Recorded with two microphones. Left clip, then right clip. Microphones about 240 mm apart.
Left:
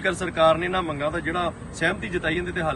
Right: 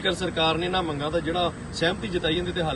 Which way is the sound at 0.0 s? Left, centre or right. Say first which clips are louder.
Left 4 dB; centre.